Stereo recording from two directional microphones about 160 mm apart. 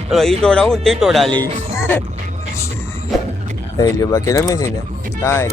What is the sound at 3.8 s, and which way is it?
Speech, 20° left (ahead or behind).